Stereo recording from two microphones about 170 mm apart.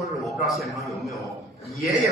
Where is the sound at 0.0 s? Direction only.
Centre (ahead or behind).